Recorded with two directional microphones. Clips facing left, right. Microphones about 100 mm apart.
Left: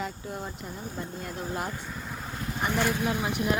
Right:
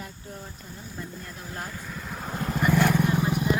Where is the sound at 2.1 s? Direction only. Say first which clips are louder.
Right 4 dB; 30° right (ahead or behind).